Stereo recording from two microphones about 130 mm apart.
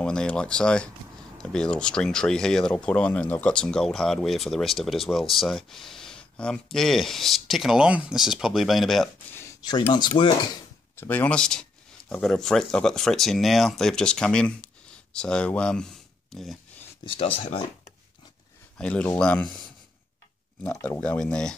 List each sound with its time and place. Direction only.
0.0 s speech: 5° left (ahead or behind)
9.3 s a sound: 20° left (ahead or behind)
9.9 s dishes: 35° left (ahead or behind)
11.0 s speech: 10° left (ahead or behind)
17.0 s speech: 45° left (ahead or behind)
18.8 s speech: 10° left (ahead or behind)
21.0 s speech: 5° left (ahead or behind)